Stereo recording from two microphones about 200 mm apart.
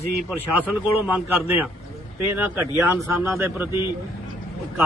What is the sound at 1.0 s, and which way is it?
Speech, 10° right (ahead or behind).